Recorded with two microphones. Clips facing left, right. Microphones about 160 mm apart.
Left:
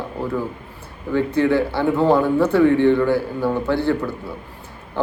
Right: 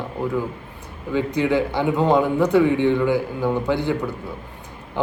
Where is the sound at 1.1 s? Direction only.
15° right (ahead or behind).